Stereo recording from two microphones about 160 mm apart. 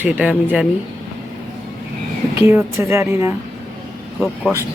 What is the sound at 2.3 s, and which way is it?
Speech, 15° right (ahead or behind).